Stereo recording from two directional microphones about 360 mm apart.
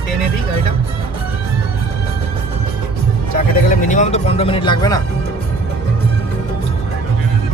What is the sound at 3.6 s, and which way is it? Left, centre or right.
Music, left.